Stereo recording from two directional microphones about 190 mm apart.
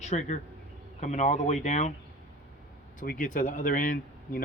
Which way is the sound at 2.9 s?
45° left (ahead or behind).